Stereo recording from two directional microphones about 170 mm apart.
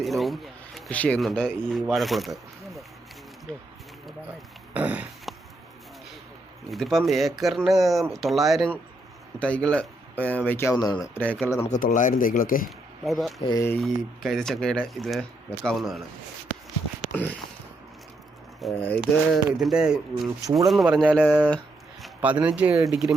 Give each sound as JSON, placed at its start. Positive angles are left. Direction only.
{"t": 0.0, "sound": "speech", "side_deg": 0}
{"t": 4.7, "sound": "a sound", "side_deg": -10}
{"t": 6.7, "sound": "speech", "side_deg": 0}
{"t": 11.8, "sound": "speech", "side_deg": 50}
{"t": 13.1, "sound": "speech", "side_deg": 0}
{"t": 13.4, "sound": "speech", "side_deg": 20}
{"t": 13.8, "sound": "speech", "side_deg": 0}
{"t": 17.0, "sound": "a sound", "side_deg": 10}
{"t": 18.6, "sound": "speech", "side_deg": 5}